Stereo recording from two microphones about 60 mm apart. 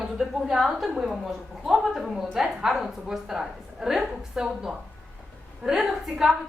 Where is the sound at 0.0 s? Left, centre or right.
Centre.